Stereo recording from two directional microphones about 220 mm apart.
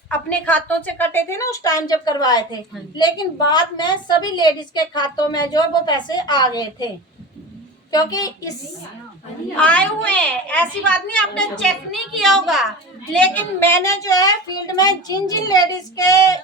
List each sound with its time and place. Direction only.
0.1 s a woman's voice: 5° left (ahead or behind)
9.6 s a child's voice: 5° left (ahead or behind)